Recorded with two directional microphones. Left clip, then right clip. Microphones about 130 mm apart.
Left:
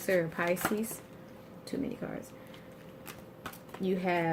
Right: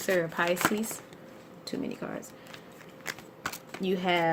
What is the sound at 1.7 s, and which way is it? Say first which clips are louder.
Speech: right 2 dB; 65° right (ahead or behind).